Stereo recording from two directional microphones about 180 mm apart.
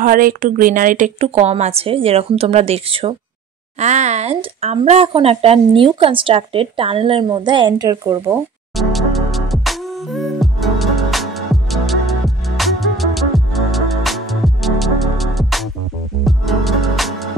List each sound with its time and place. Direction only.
0.0 s speech: 50° right (ahead or behind); by 8.4 s 20° right (ahead or behind)
8.7 s music: centre (ahead or behind)